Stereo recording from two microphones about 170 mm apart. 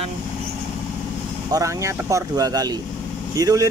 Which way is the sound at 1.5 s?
20° right (ahead or behind).